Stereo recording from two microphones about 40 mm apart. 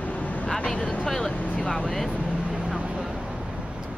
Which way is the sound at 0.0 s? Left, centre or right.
Left.